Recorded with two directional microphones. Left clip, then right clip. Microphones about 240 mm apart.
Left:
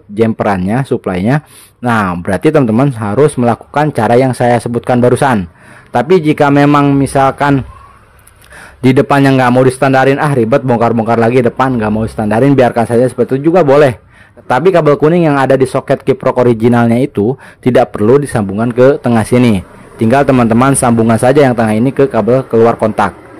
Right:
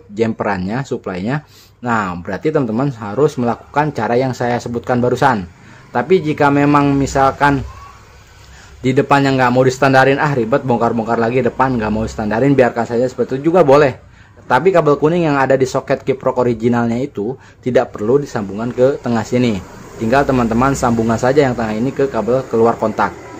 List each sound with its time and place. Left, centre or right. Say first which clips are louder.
0.1 s a man's voice: left 6 dB; left
8.8 s a man's voice: left 4 dB; left